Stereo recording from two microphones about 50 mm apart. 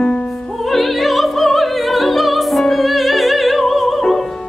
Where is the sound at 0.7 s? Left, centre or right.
Centre.